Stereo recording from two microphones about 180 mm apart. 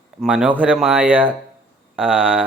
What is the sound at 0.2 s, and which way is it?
Speech, 5° right (ahead or behind).